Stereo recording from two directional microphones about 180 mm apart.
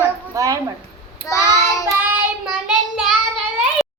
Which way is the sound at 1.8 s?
5° right (ahead or behind).